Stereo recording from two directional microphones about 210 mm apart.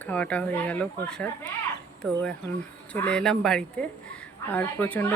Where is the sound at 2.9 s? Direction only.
5° left (ahead or behind).